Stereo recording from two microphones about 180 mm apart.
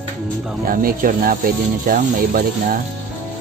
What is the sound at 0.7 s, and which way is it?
Speech, 55° right (ahead or behind).